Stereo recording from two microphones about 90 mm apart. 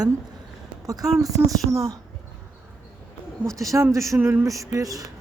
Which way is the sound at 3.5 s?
35° right (ahead or behind).